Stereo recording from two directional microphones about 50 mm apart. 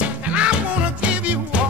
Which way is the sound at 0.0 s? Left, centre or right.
Right.